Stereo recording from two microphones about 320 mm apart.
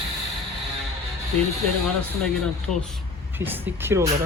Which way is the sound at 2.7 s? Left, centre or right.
Centre.